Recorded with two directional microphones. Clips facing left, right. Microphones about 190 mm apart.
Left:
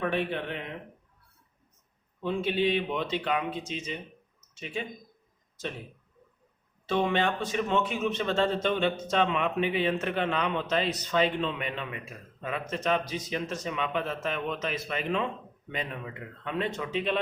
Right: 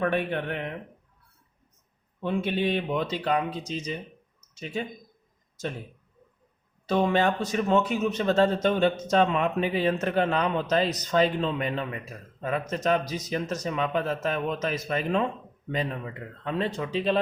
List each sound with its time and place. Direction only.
0.0 s speech: 55° right (ahead or behind)
2.2 s speech: 50° right (ahead or behind)
6.8 s speech: 40° right (ahead or behind)